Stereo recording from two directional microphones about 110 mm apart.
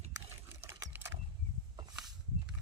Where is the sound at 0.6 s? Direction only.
25° right (ahead or behind).